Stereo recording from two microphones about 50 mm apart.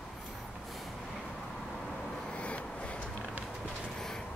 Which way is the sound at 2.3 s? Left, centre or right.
Left.